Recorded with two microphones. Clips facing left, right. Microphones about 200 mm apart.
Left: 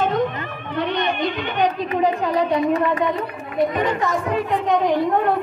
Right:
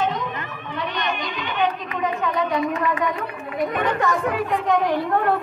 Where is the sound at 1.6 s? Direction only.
35° left (ahead or behind).